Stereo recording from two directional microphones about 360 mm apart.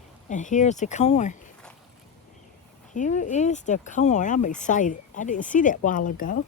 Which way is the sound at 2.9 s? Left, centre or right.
Left.